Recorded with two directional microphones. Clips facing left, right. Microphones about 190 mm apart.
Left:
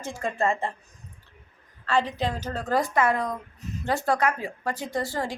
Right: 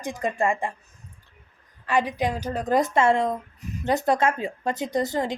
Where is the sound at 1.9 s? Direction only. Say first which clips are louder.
Right 2 dB; 15° right (ahead or behind).